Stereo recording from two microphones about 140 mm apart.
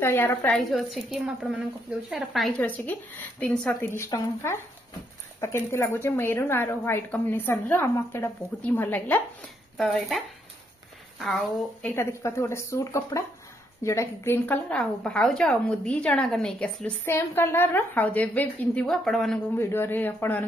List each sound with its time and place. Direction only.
0.0 s a woman's voice: 15° left (ahead or behind)
0.6 s a woman's voice: centre (ahead or behind)
2.6 s a woman's voice: 10° left (ahead or behind)
11.8 s a woman's voice: 20° left (ahead or behind)
19.5 s a woman's voice: 15° left (ahead or behind)